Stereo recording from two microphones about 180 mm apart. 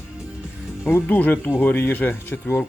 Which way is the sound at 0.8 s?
10° left (ahead or behind).